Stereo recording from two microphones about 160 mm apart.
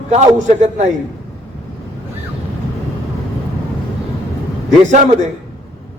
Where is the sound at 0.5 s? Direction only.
45° right (ahead or behind).